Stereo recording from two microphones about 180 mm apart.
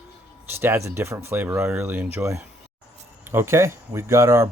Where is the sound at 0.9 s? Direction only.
15° right (ahead or behind).